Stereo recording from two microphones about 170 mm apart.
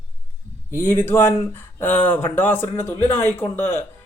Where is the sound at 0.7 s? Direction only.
15° left (ahead or behind).